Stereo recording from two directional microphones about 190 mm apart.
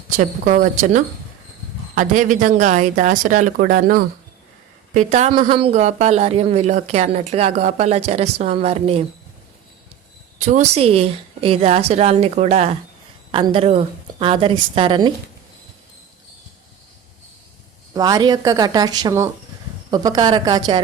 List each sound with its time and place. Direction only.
0.2 s speech: 45° right (ahead or behind)
5.3 s speech: 30° right (ahead or behind)
10.4 s a woman's voice: 35° right (ahead or behind)
17.9 s a woman's voice: 20° right (ahead or behind)